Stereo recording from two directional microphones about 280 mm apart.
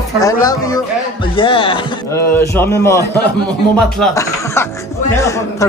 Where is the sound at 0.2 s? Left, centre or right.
Centre.